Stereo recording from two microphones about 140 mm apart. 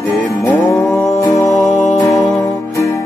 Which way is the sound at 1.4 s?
Centre (ahead or behind).